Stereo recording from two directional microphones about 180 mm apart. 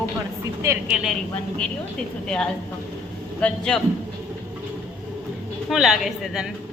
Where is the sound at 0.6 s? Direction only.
15° right (ahead or behind).